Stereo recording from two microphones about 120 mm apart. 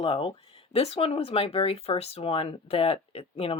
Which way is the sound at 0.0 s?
50° left (ahead or behind).